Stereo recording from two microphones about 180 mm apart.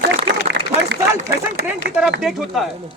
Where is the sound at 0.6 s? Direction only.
75° right (ahead or behind).